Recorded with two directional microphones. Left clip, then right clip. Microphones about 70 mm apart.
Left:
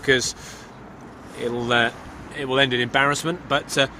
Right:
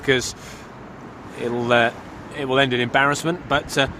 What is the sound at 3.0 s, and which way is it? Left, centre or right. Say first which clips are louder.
Speech: right 2 dB; centre.